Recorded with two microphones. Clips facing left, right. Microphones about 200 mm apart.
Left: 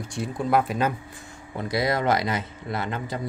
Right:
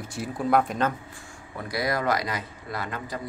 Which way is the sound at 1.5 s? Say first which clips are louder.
Left 3 dB; 25° left (ahead or behind).